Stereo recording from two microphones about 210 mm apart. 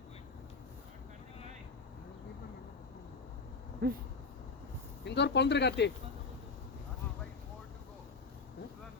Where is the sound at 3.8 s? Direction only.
50° right (ahead or behind).